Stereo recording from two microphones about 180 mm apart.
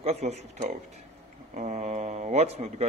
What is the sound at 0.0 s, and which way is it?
Speech, 35° right (ahead or behind).